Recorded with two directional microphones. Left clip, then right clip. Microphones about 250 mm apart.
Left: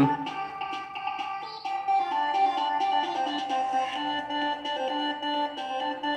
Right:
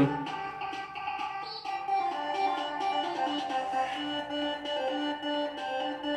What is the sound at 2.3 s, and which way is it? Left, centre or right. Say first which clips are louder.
Music: left 5 dB; left.